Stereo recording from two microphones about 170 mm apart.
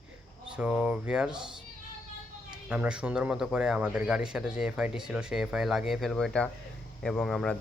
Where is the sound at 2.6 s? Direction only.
5° right (ahead or behind).